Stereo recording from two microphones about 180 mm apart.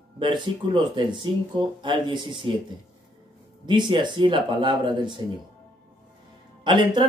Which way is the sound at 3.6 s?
25° right (ahead or behind).